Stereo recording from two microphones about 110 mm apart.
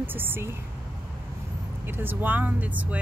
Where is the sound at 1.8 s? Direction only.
20° right (ahead or behind).